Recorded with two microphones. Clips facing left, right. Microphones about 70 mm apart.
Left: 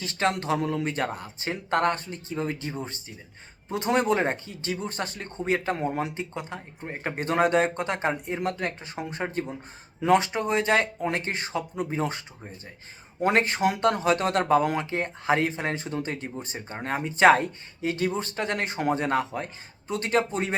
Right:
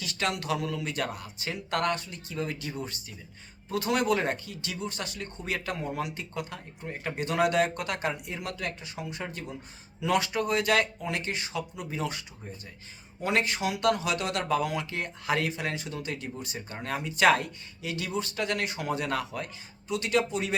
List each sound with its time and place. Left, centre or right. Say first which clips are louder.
0.0 s speech: left 5 dB; left
13.2 s speech: left 5 dB; left